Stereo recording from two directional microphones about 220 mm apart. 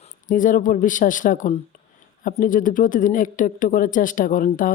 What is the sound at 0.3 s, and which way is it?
Speech, 35° left (ahead or behind).